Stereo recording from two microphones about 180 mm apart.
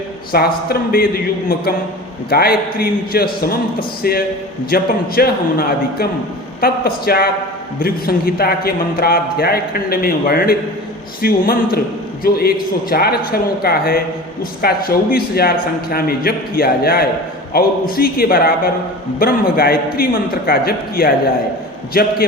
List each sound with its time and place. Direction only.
0.3 s a man's voice: 55° left (ahead or behind)